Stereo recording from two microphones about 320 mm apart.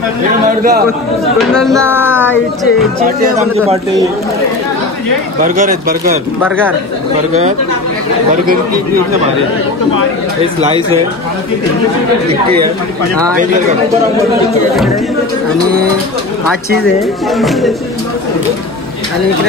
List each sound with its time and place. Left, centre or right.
0.6 s speech: right
1.5 s a sound: centre
2.3 s speech: centre
3.2 s speech: right
13.4 s speech: right
17.4 s speech: centre